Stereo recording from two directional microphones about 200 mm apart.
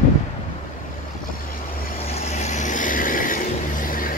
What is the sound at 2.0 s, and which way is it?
Vehicle, 35° left (ahead or behind).